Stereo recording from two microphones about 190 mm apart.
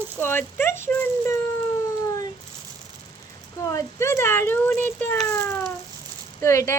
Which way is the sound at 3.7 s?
15° left (ahead or behind).